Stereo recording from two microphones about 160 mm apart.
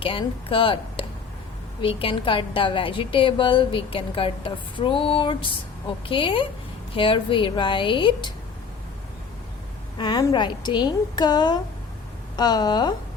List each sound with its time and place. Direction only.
0.0 s a woman's voice: 35° left (ahead or behind)
10.0 s a woman's voice: 30° left (ahead or behind)